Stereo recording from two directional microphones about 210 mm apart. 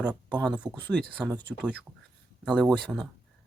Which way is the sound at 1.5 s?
5° right (ahead or behind).